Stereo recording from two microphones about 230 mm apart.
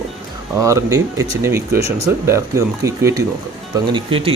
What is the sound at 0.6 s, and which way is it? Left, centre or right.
Speech, centre.